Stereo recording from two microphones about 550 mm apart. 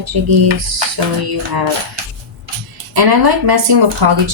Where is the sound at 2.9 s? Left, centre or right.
Right.